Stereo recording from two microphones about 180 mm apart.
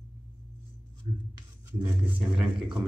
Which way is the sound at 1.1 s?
30° right (ahead or behind).